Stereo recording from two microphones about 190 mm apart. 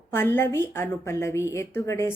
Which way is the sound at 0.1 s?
10° left (ahead or behind).